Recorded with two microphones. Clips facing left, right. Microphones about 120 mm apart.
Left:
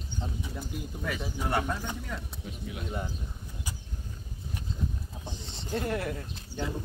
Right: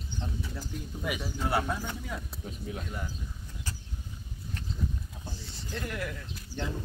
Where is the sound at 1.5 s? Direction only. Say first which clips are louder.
Even; 5° right (ahead or behind).